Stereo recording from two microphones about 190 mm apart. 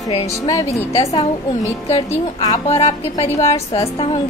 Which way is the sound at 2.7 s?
30° left (ahead or behind).